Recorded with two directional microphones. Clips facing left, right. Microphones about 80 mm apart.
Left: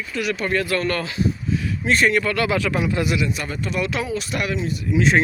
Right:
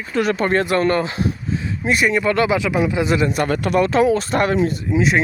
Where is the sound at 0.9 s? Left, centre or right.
Right.